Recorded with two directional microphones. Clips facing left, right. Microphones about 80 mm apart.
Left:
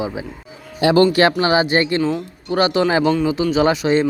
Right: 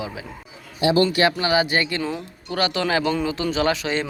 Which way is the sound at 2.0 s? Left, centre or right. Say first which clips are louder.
Left 7 dB; centre.